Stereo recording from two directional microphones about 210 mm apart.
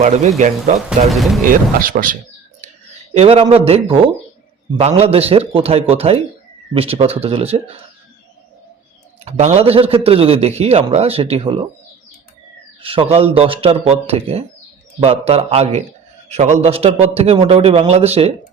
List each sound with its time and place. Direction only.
0.0 s speech: 35° right (ahead or behind)
1.1 s speech: centre (ahead or behind)
1.5 s speech: 40° right (ahead or behind)
3.2 s a man's voice: 25° right (ahead or behind)
9.2 s a man's voice: 30° right (ahead or behind)
12.8 s a man's voice: 25° right (ahead or behind)